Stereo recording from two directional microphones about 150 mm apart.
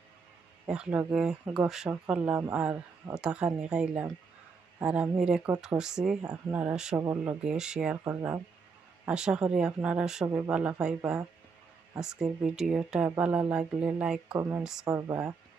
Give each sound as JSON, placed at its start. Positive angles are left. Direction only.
{"t": 0.7, "sound": "speech", "side_deg": -5}
{"t": 7.0, "sound": "speech", "side_deg": -20}
{"t": 7.4, "sound": "speech", "side_deg": -5}
{"t": 8.0, "sound": "speech", "side_deg": -15}
{"t": 12.0, "sound": "speech", "side_deg": -5}
{"t": 14.9, "sound": "speech", "side_deg": -20}